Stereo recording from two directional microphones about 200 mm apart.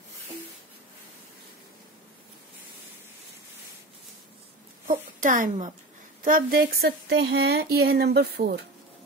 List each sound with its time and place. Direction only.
4.8 s speech: 40° right (ahead or behind)